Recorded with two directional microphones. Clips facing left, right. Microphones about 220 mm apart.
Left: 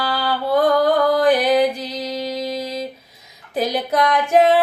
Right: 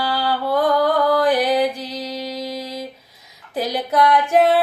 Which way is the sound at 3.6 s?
15° left (ahead or behind).